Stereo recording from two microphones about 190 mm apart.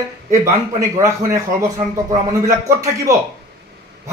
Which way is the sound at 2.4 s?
15° right (ahead or behind).